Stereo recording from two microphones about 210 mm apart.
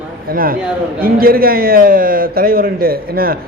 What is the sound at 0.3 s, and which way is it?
A man's voice, 45° right (ahead or behind).